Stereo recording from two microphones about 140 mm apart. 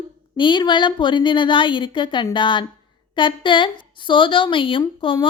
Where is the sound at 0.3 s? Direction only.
35° left (ahead or behind).